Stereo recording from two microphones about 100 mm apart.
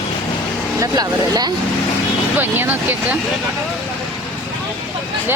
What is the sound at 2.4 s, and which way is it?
Speech, 20° right (ahead or behind).